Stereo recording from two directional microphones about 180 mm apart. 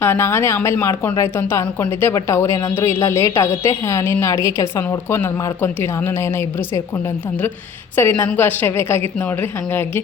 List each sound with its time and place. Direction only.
0.0 s speech: 15° left (ahead or behind)
7.9 s speech: 10° left (ahead or behind)